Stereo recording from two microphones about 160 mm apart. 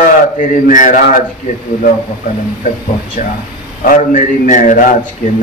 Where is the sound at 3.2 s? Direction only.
50° left (ahead or behind).